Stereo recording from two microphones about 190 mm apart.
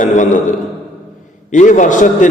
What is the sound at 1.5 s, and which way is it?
Mantra, 40° left (ahead or behind).